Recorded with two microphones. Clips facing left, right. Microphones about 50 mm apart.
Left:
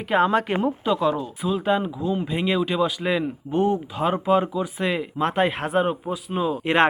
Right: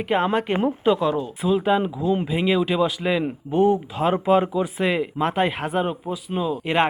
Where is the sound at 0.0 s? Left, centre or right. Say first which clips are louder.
Left 1 dB; centre.